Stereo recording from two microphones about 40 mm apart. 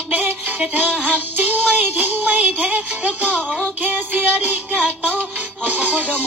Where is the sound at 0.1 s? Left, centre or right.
Right.